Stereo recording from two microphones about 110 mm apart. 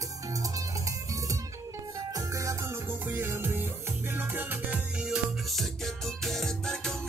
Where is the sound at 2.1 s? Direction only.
30° right (ahead or behind).